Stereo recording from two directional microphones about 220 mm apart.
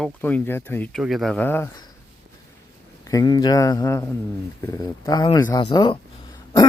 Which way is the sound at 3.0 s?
15° left (ahead or behind).